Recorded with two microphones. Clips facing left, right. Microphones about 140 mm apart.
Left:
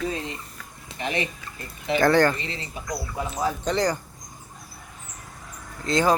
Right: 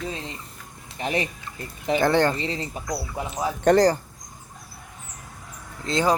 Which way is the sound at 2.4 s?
35° right (ahead or behind).